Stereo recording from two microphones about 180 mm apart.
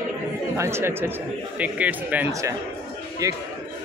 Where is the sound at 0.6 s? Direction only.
15° right (ahead or behind).